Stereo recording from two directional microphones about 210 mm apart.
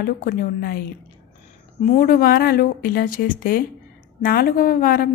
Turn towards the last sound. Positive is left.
turn(degrees=45)  # may be behind; listen again after turning